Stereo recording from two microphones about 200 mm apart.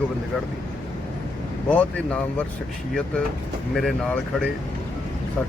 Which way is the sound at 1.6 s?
5° left (ahead or behind).